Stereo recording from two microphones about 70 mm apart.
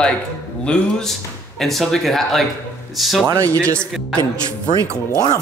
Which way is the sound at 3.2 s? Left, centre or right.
Right.